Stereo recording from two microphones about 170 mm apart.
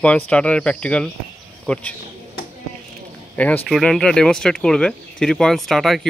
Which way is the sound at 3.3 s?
10° left (ahead or behind).